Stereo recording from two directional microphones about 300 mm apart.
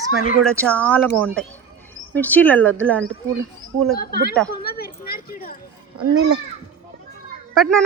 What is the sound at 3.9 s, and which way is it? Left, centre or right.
Speech, left.